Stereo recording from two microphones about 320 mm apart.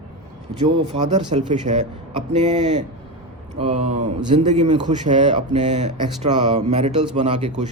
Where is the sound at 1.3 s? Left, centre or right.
Right.